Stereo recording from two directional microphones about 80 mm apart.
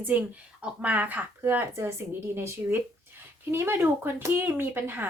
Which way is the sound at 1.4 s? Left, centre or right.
Right.